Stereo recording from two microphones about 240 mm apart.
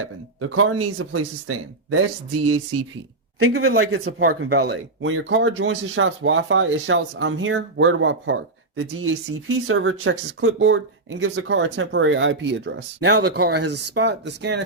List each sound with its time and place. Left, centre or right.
0.0 s speech: right